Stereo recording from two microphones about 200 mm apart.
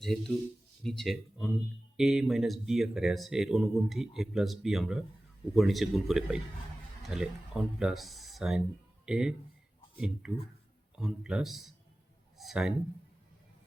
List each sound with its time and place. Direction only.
0.0 s speech: centre (ahead or behind)